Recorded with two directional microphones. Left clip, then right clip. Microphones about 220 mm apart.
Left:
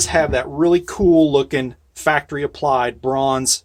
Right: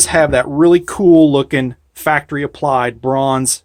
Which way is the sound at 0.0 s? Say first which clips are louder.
Right 5 dB; 45° right (ahead or behind).